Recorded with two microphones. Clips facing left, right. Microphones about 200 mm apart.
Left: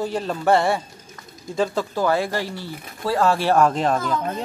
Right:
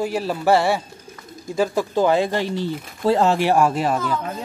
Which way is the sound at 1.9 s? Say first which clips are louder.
Right 3 dB; 20° right (ahead or behind).